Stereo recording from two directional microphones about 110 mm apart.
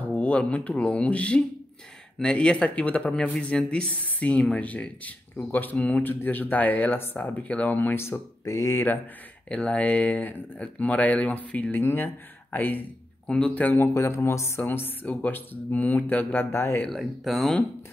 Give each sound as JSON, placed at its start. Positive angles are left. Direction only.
{"t": 0.1, "sound": "speech", "side_deg": 10}
{"t": 16.8, "sound": "speech", "side_deg": 0}